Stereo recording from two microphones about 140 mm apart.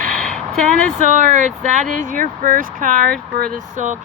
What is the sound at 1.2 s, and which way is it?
Speech, 65° right (ahead or behind).